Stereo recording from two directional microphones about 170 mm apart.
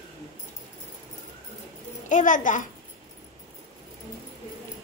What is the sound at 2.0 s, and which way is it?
Speech, 50° left (ahead or behind).